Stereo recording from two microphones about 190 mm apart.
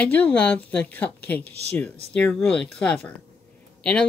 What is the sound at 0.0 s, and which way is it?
Speech, 10° left (ahead or behind).